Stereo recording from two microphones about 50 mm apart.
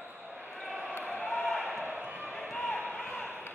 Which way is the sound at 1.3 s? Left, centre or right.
Centre.